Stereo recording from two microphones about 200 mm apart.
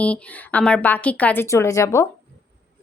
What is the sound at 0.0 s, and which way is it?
A woman's voice, 5° left (ahead or behind).